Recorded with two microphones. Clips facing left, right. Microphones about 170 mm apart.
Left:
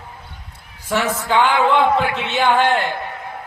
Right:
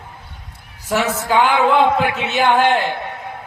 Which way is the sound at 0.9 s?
10° right (ahead or behind).